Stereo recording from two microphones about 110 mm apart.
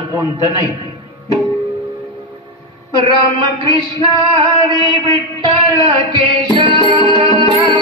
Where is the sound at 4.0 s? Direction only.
45° right (ahead or behind).